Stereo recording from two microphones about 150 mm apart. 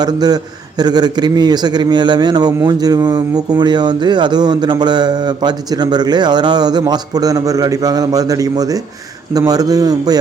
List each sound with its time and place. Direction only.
0.0 s speech: 25° right (ahead or behind)